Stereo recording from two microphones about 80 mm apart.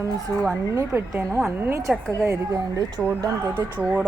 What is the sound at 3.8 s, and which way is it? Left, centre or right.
Speech, centre.